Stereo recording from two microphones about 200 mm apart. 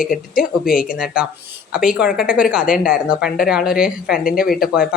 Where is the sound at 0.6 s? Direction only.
45° left (ahead or behind).